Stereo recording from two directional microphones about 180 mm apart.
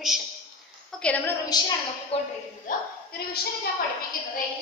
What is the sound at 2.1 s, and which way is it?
Speech, 30° left (ahead or behind).